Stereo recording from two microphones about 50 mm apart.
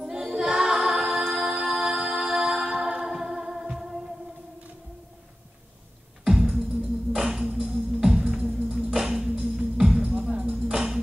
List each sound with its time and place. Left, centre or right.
0.0 s music: centre
6.2 s music: centre